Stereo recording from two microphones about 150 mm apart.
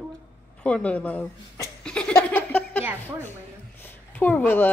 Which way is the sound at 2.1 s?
10° left (ahead or behind).